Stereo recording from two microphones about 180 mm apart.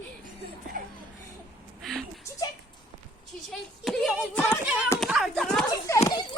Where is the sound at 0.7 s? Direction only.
50° right (ahead or behind).